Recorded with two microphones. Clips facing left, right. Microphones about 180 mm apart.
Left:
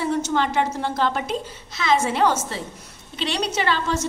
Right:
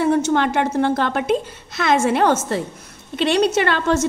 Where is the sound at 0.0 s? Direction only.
60° right (ahead or behind).